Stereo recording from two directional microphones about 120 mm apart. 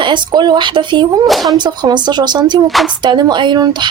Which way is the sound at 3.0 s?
40° right (ahead or behind).